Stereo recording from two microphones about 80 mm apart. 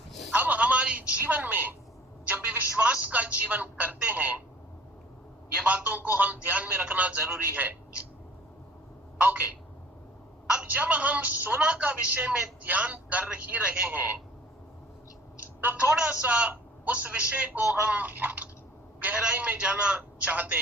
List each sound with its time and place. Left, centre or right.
0.3 s a sound: centre
2.2 s telephone: right
5.6 s a man's voice: centre
9.1 s a sound: right
10.4 s telephone: centre
11.6 s a woman's voice: centre
15.6 s a man's voice: right